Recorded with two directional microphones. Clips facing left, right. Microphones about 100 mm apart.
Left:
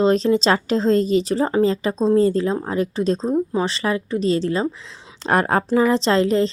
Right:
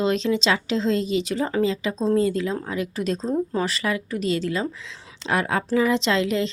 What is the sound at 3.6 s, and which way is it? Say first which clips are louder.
A woman's voice: left 3 dB; 30° left (ahead or behind).